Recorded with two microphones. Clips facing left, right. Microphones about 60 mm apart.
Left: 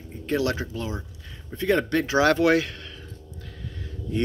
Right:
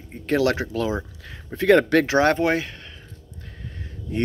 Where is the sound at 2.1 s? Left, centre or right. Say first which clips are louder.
Left 3 dB; right.